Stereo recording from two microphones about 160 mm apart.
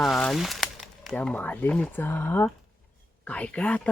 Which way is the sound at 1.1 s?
10° left (ahead or behind).